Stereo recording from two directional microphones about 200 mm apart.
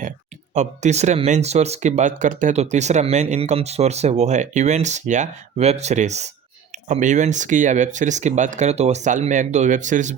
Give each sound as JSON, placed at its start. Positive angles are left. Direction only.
{"t": 0.5, "sound": "speech", "side_deg": -35}